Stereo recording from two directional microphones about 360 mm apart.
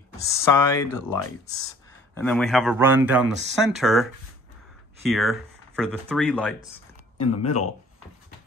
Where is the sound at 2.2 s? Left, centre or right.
Centre.